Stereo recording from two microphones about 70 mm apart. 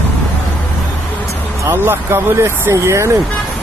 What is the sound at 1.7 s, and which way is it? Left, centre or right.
Speech, right.